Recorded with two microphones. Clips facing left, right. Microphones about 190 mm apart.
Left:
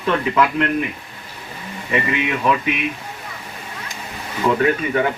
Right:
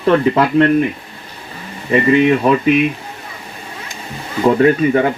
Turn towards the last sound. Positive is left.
turn(degrees=-35)  # may be behind; listen again after turning